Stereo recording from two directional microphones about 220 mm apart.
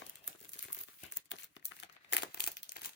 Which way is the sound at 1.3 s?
55° left (ahead or behind).